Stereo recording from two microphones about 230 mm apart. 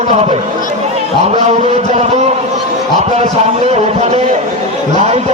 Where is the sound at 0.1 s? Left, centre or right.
Right.